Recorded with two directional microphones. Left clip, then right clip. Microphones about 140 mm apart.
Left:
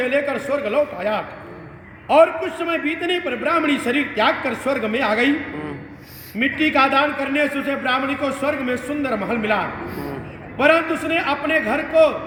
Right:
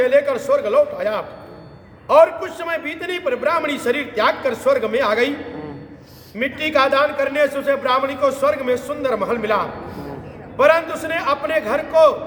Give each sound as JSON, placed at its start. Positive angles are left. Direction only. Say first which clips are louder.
{"t": 0.0, "sound": "a man's voice", "louder": "right 5 dB", "side_deg": -25}
{"t": 6.4, "sound": "a man's voice", "louder": "even", "side_deg": -25}